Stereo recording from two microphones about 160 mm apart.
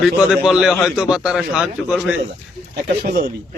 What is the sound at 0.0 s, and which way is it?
A man's voice, 5° right (ahead or behind).